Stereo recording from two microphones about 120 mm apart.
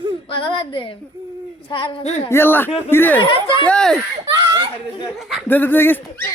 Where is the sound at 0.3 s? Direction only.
45° left (ahead or behind).